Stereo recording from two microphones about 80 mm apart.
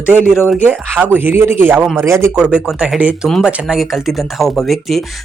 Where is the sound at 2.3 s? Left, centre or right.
Centre.